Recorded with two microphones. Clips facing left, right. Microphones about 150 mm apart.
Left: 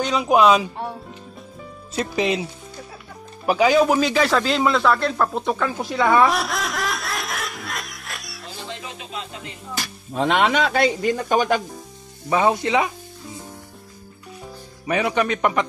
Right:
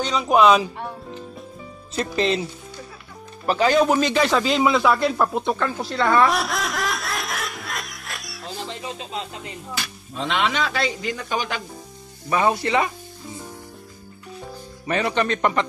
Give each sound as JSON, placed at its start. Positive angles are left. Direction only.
{"t": 0.0, "sound": "speech", "side_deg": 5}
{"t": 2.0, "sound": "speech", "side_deg": 10}
{"t": 3.4, "sound": "speech", "side_deg": 10}
{"t": 5.8, "sound": "snicker", "side_deg": 10}
{"t": 10.1, "sound": "speech", "side_deg": 55}
{"t": 12.3, "sound": "speech", "side_deg": 15}
{"t": 14.9, "sound": "speech", "side_deg": 10}